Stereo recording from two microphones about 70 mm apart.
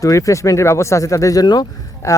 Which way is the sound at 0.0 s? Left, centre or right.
Left.